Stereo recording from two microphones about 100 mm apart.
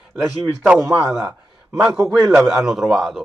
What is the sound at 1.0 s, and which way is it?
Speech, 30° right (ahead or behind).